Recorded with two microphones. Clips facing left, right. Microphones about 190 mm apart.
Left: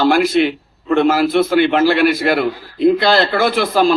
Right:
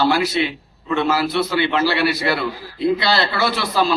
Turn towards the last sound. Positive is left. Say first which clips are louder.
# left 5 dB
turn(degrees=50)  # may be behind; listen again after turning